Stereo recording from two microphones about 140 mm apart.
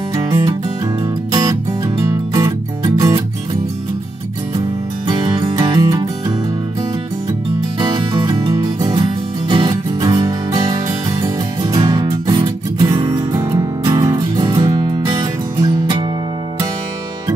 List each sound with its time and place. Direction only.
0.1 s music: 20° right (ahead or behind)
4.6 s music: 30° right (ahead or behind)
7.8 s music: 30° right (ahead or behind)